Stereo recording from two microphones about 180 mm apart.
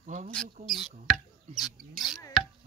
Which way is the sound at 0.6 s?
Centre (ahead or behind).